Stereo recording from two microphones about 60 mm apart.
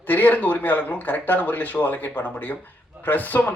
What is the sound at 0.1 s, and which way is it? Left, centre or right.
Speech, left.